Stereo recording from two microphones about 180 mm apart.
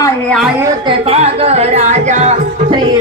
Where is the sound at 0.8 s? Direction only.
30° right (ahead or behind).